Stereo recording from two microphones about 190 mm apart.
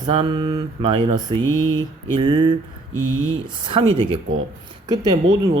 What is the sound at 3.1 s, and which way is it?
Speech, 90° right.